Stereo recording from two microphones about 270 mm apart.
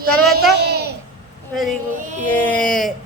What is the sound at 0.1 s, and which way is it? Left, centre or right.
Speech, centre.